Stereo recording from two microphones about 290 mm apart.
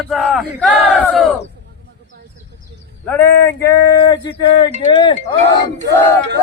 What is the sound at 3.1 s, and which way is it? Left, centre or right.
Speech, centre.